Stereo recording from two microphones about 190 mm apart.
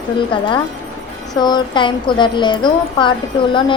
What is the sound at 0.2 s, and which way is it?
A woman's voice, 25° left (ahead or behind).